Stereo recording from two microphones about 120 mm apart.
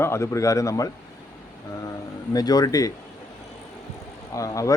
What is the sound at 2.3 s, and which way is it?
Speech, 35° left (ahead or behind).